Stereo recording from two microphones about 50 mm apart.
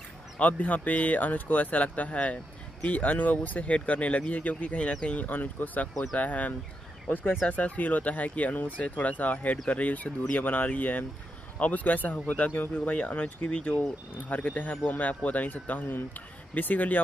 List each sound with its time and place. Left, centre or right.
0.4 s speech: left